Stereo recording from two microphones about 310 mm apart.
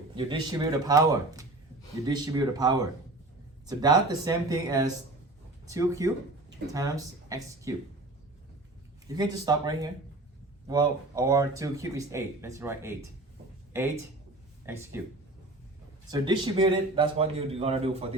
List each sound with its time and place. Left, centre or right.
0.3 s speech: centre
9.0 s speech: centre
14.7 s speech: centre
16.0 s a man's voice: centre